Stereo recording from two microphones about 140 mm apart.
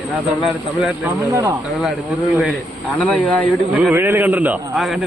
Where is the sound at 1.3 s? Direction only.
20° right (ahead or behind).